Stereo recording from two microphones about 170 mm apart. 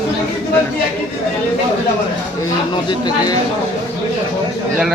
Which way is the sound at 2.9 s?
25° left (ahead or behind).